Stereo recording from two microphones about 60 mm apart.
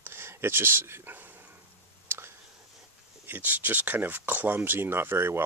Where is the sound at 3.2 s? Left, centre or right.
Right.